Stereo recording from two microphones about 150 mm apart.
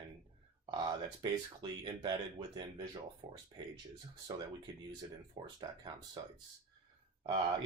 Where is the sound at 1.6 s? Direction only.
30° right (ahead or behind).